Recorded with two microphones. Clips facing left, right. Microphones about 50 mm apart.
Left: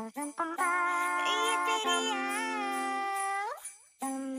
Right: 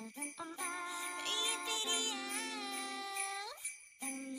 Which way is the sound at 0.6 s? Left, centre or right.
Left.